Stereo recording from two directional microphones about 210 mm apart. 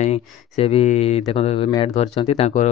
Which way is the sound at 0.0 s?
30° left (ahead or behind).